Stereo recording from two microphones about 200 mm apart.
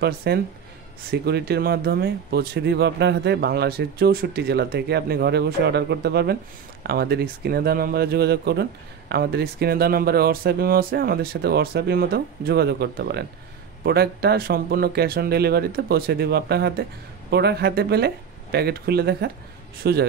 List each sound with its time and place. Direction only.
0.0 s speech: 55° right (ahead or behind)